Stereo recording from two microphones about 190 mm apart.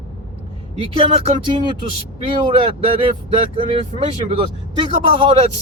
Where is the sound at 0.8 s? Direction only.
30° right (ahead or behind).